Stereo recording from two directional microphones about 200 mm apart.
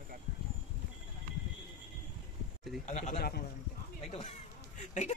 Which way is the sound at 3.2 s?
50° left (ahead or behind).